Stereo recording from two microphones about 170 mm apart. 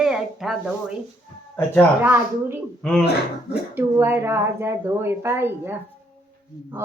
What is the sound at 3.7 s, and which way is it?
Speech, 15° right (ahead or behind).